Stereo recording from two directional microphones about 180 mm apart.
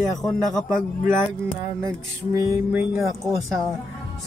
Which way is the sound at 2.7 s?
5° right (ahead or behind).